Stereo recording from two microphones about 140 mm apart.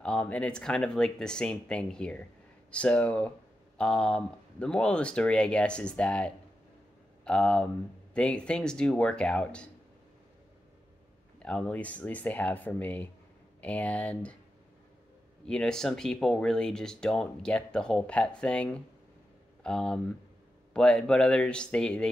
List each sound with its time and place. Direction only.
0.0 s speech: 5° left (ahead or behind)
11.3 s speech: 5° left (ahead or behind)
15.4 s speech: 5° left (ahead or behind)